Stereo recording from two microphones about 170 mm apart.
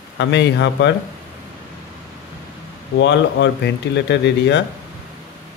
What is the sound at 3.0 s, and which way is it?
Speech, 90° left.